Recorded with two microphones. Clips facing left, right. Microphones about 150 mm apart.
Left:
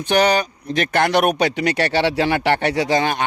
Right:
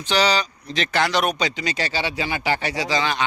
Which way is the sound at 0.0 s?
55° left (ahead or behind).